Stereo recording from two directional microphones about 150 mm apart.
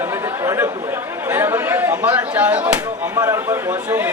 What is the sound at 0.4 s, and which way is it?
Chatter, 20° right (ahead or behind).